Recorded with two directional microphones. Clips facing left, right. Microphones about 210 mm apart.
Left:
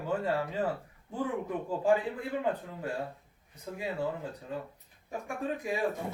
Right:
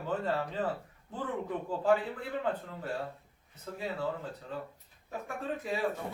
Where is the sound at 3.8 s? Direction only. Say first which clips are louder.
Left 1 dB; 15° left (ahead or behind).